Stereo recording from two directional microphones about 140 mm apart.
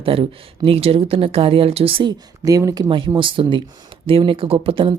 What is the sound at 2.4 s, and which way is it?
Speech, 25° right (ahead or behind).